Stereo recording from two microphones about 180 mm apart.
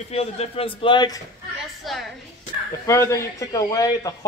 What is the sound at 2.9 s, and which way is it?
Speech, 15° left (ahead or behind).